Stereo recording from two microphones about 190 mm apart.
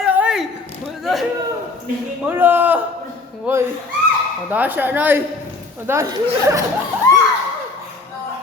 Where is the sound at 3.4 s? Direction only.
15° right (ahead or behind).